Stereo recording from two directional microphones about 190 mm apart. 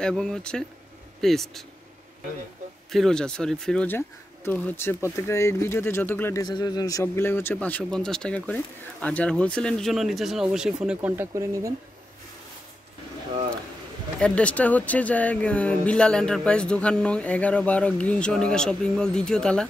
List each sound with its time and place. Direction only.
0.0 s speech: 5° left (ahead or behind)
2.9 s speech: centre (ahead or behind); by 11.7 s 15° right (ahead or behind)
14.2 s speech: 5° left (ahead or behind)